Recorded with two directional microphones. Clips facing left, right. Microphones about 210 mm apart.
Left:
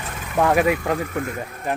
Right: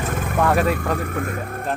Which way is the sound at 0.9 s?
55° right (ahead or behind).